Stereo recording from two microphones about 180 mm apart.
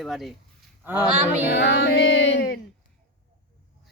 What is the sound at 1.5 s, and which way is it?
Music, 75° left (ahead or behind).